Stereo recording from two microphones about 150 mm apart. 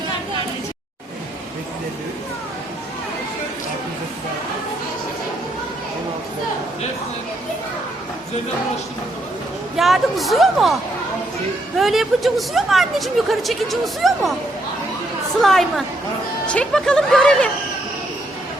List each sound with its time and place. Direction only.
9.7 s a woman's voice: centre (ahead or behind)
11.8 s a woman's voice: centre (ahead or behind)
15.4 s a woman's voice: centre (ahead or behind)